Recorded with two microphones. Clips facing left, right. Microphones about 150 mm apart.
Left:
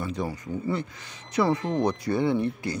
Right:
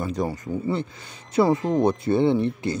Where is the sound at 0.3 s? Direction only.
30° right (ahead or behind).